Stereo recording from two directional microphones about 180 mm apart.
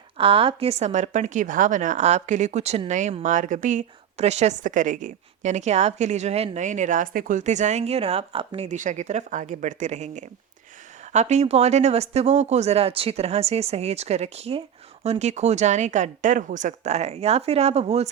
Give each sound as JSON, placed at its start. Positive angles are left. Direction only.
{"t": 0.2, "sound": "a woman's voice", "side_deg": -30}